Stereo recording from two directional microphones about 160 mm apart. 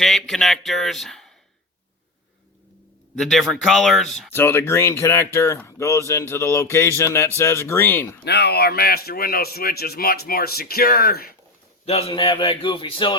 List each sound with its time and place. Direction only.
0.0 s speech: centre (ahead or behind)
3.2 s speech: centre (ahead or behind)
4.3 s speech: 15° left (ahead or behind)
8.2 s speech: 90° left; by 11.3 s 70° left (ahead or behind)
11.9 s a man's voice: 40° left (ahead or behind)